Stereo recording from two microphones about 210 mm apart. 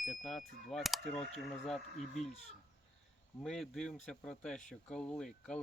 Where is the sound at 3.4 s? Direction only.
Centre (ahead or behind).